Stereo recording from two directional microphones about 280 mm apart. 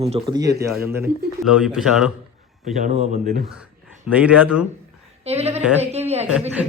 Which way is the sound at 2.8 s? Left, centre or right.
Right.